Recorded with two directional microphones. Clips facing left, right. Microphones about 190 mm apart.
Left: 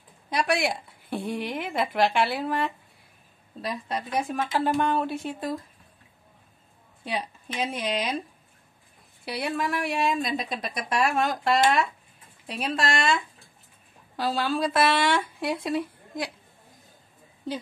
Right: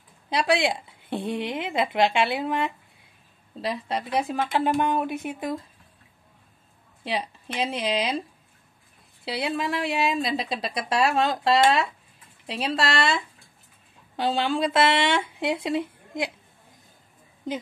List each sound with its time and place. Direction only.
0.3 s speech: 25° right (ahead or behind)
7.6 s speech: 30° right (ahead or behind)
9.2 s speech: 25° right (ahead or behind)